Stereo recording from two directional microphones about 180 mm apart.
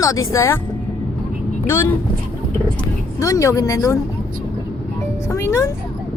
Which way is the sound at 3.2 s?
20° left (ahead or behind).